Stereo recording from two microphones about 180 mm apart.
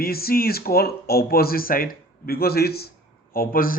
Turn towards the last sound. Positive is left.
turn(degrees=55)  # may be behind; listen again after turning